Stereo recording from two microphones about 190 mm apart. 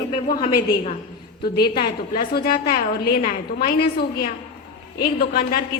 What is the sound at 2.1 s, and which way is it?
A woman's voice, 50° left (ahead or behind).